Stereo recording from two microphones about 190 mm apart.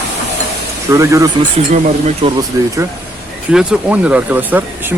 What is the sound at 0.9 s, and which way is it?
Speech, 15° right (ahead or behind).